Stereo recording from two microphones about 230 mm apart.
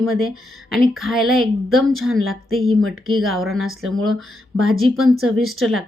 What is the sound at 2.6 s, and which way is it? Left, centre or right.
Speech, right.